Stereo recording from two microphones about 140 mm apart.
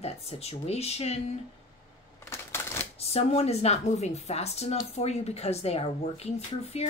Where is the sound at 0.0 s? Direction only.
45° left (ahead or behind).